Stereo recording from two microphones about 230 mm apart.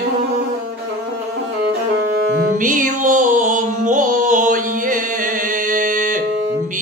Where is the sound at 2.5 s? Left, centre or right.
Right.